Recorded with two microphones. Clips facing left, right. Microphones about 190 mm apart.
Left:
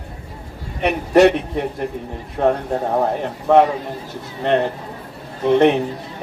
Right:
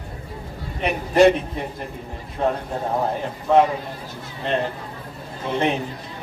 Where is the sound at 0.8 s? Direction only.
70° left (ahead or behind).